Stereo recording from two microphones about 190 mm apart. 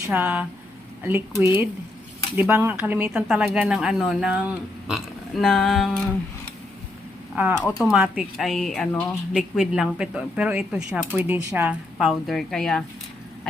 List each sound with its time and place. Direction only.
0.1 s speech: 5° right (ahead or behind)
7.3 s speech: 5° right (ahead or behind)